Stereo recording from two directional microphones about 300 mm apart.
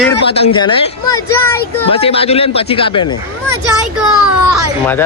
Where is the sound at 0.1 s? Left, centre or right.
Centre.